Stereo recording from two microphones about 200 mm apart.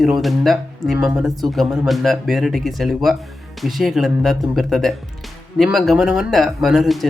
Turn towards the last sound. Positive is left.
turn(degrees=0)  # may be behind; listen again after turning